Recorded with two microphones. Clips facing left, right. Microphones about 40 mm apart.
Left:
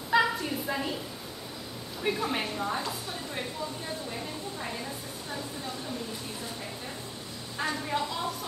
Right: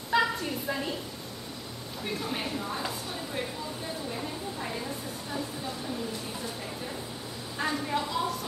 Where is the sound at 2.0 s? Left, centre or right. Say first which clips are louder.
Left 4 dB; centre.